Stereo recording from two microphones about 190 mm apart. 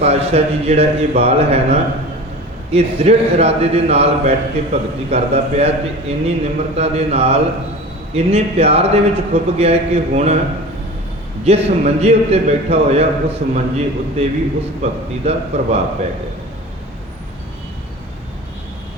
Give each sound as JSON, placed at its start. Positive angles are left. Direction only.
{"t": 0.0, "sound": "a man's voice", "side_deg": -35}
{"t": 11.4, "sound": "a man's voice", "side_deg": -35}